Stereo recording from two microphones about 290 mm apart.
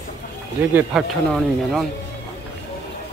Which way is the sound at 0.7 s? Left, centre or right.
Centre.